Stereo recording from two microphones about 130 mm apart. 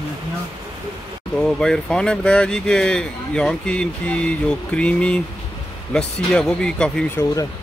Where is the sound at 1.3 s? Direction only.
5° left (ahead or behind).